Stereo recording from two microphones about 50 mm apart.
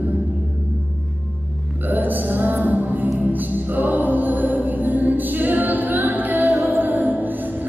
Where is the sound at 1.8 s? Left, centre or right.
Right.